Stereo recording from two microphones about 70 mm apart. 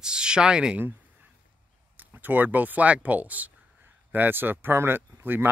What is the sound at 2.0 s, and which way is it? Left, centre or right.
Speech, right.